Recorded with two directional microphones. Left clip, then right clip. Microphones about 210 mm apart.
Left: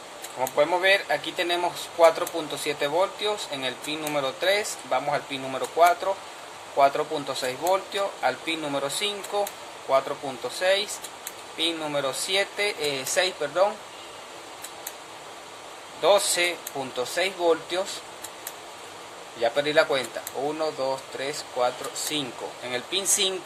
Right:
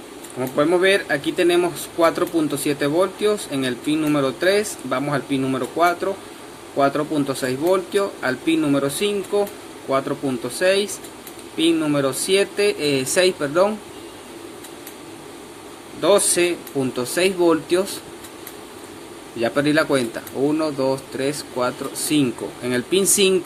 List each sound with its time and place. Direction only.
0.3 s speech: 10° right (ahead or behind)
10.6 s speech: 15° right (ahead or behind)
16.0 s speech: 10° right (ahead or behind)
19.4 s speech: 10° right (ahead or behind)